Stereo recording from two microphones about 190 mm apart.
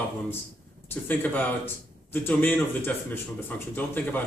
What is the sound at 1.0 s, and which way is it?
Speech, 10° left (ahead or behind).